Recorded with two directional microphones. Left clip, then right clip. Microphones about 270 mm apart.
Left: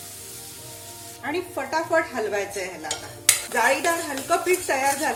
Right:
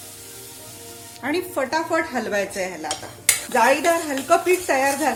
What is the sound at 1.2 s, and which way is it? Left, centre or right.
Speech, right.